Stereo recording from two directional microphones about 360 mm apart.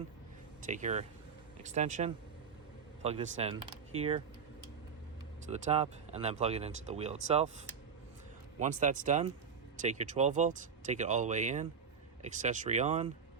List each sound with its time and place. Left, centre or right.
0.7 s speech: centre
5.5 s speech: centre
8.6 s speech: right